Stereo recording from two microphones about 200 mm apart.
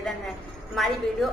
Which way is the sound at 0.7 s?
Centre (ahead or behind).